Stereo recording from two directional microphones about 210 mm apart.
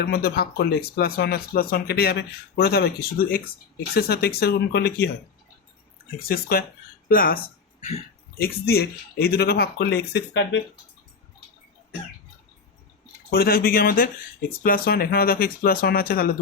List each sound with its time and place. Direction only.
0.0 s speech: 50° left (ahead or behind)
6.1 s speech: 45° left (ahead or behind)
7.8 s speech: 30° left (ahead or behind)
8.4 s speech: 50° left (ahead or behind)
13.3 s speech: 45° left (ahead or behind)